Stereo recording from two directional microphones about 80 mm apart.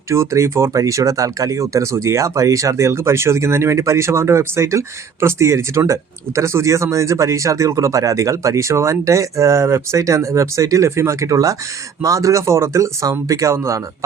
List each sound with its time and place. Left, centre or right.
0.1 s speech: right